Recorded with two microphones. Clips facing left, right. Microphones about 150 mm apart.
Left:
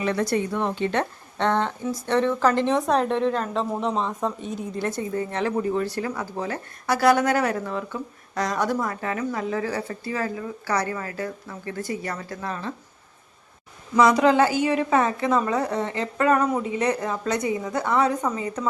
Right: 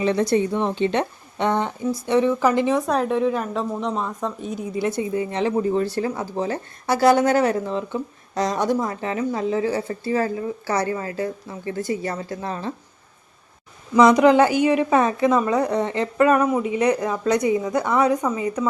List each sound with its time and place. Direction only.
0.0 s speech: 20° right (ahead or behind)
13.9 s a woman's voice: 15° right (ahead or behind)